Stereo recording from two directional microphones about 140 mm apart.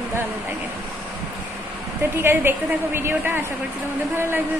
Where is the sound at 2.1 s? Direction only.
15° right (ahead or behind).